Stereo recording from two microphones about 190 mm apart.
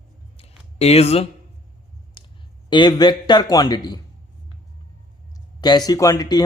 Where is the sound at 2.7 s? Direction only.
25° left (ahead or behind).